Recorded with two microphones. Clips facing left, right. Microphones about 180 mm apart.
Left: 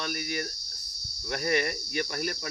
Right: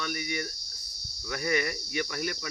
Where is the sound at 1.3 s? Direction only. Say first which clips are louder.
Left 1 dB; 50° left (ahead or behind).